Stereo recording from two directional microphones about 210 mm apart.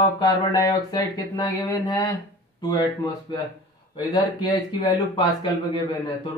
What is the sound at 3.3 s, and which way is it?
Speech, 20° left (ahead or behind).